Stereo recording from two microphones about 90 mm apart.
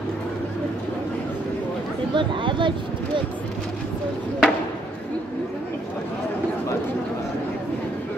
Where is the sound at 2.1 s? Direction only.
65° right (ahead or behind).